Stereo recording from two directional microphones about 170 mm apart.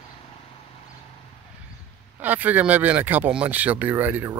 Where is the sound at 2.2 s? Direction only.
10° right (ahead or behind).